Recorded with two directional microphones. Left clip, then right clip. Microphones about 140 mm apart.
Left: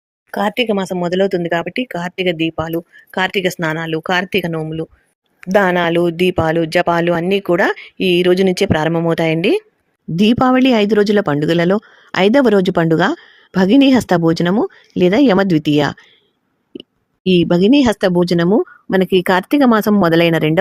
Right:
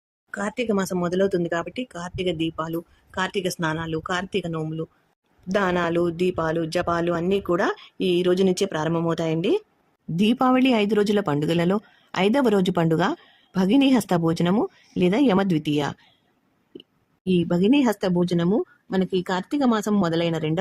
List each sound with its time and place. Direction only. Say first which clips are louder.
0.3 s speech: left 10 dB; 25° left (ahead or behind)
17.2 s speech: left 9 dB; 45° left (ahead or behind)